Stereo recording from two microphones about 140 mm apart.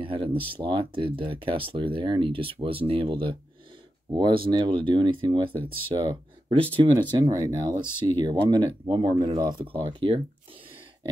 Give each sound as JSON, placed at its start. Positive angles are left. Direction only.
{"t": 0.0, "sound": "speech", "side_deg": -40}